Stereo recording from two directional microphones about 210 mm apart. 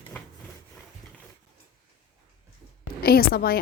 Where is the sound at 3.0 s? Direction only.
45° left (ahead or behind).